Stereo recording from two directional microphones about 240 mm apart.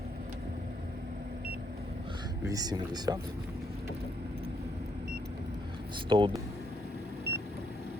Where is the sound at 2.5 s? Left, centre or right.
Centre.